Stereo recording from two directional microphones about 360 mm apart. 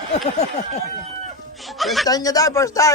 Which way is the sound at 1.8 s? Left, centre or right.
Centre.